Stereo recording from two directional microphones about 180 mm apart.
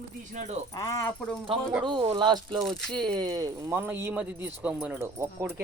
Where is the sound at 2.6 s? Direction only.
Centre (ahead or behind).